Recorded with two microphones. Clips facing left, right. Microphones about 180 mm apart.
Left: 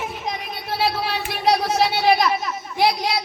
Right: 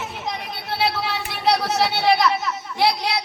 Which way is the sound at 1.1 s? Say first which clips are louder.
Left 1 dB; 15° left (ahead or behind).